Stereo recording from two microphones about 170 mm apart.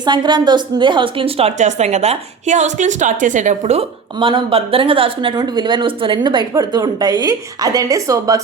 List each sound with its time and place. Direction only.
0.0 s a woman's voice: 25° right (ahead or behind)